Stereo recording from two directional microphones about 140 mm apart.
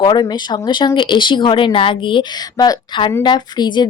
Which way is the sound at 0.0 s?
30° left (ahead or behind).